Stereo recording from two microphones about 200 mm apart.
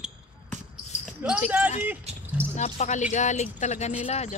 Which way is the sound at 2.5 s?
35° left (ahead or behind).